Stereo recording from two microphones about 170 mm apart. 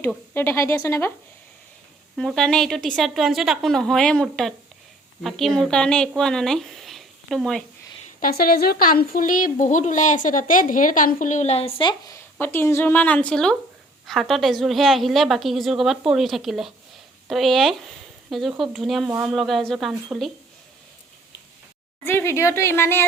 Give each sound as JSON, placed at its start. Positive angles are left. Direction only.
{"t": 0.3, "sound": "a woman's voice", "side_deg": 15}
{"t": 2.1, "sound": "a woman's voice", "side_deg": 0}
{"t": 8.2, "sound": "a woman's voice", "side_deg": 65}
{"t": 22.0, "sound": "a woman's voice", "side_deg": 15}